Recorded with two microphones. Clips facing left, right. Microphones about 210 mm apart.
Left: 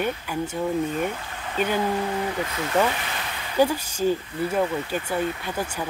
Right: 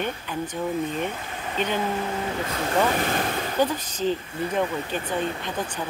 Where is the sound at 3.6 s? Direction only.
10° left (ahead or behind).